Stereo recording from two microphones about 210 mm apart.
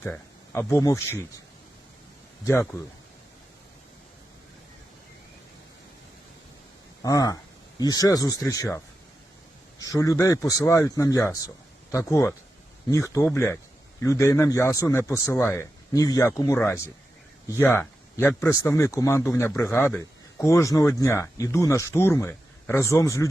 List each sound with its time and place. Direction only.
0.0 s speech: 10° left (ahead or behind)
2.4 s speech: 10° left (ahead or behind)
7.0 s speech: 15° left (ahead or behind)